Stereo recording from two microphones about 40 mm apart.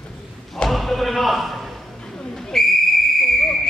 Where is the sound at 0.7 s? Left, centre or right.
Centre.